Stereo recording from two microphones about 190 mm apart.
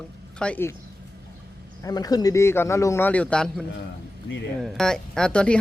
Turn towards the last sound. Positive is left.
turn(degrees=5)  # may be behind; listen again after turning